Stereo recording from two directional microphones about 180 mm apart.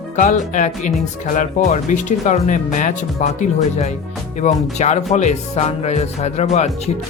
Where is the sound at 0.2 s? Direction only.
45° left (ahead or behind).